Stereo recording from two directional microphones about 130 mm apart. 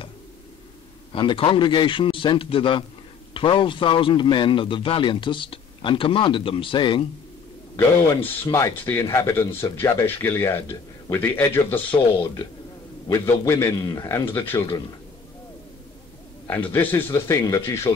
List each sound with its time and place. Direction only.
1.1 s a man's voice: 40° left (ahead or behind)
8.1 s speech: 20° left (ahead or behind)
11.9 s a man's voice: 35° left (ahead or behind)
13.1 s a man's voice: 20° left (ahead or behind)
16.4 s a man's voice: 15° left (ahead or behind)